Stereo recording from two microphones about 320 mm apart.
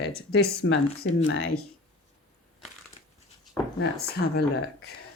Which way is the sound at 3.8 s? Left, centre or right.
Left.